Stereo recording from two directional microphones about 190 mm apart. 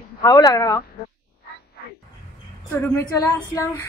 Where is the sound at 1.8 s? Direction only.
55° left (ahead or behind).